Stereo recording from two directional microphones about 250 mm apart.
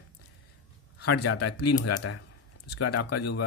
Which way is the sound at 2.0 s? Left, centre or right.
Left.